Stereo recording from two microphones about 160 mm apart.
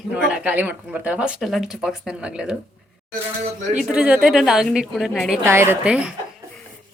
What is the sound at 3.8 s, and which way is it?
A woman's voice, 5° right (ahead or behind).